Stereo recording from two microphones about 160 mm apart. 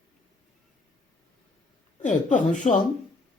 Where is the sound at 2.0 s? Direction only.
50° left (ahead or behind).